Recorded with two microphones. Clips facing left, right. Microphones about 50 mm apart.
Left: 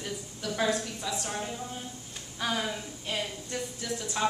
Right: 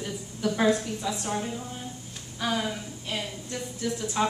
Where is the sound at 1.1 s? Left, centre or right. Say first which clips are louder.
Right 3 dB; centre.